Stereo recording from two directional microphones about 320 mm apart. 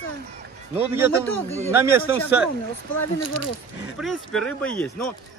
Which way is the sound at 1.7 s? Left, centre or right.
Centre.